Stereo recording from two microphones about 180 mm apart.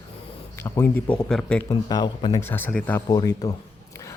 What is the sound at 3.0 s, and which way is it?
Speech, 20° left (ahead or behind).